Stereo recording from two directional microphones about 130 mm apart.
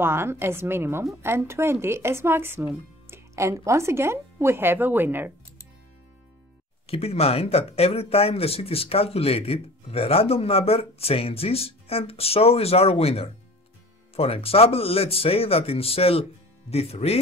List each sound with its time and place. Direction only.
0.0 s a woman's voice: 20° right (ahead or behind)
6.9 s speech: 50° left (ahead or behind)